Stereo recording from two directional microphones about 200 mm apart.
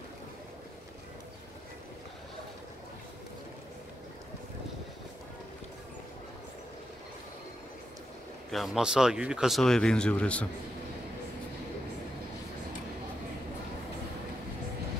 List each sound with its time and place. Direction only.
8.5 s speech: centre (ahead or behind)